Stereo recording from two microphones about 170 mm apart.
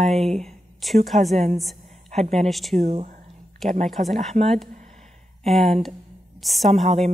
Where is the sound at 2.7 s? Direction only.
40° right (ahead or behind).